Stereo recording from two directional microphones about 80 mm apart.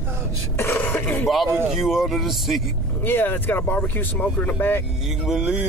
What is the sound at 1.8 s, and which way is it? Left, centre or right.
Speech, centre.